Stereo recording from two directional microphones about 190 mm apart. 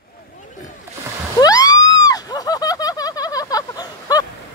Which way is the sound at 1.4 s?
20° left (ahead or behind).